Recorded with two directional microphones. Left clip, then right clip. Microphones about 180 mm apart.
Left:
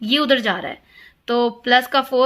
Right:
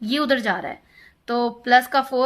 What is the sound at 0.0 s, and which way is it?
A woman's voice, 50° left (ahead or behind).